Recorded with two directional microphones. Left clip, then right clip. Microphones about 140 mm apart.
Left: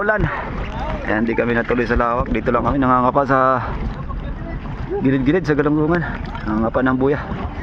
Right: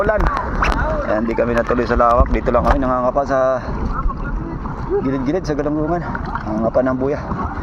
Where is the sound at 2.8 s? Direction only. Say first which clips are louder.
Left 2 dB; 90° left.